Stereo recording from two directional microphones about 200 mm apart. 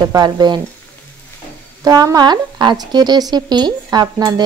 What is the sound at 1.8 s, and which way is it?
Speech, 20° right (ahead or behind).